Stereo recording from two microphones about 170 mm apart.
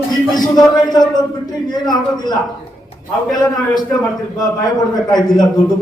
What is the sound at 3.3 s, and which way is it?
Speech, 25° left (ahead or behind).